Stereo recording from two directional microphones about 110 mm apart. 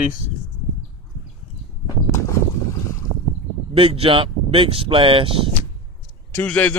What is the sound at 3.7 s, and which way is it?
Speech, 60° right (ahead or behind).